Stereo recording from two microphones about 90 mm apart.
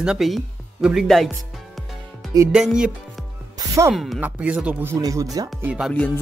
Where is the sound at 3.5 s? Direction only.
35° right (ahead or behind).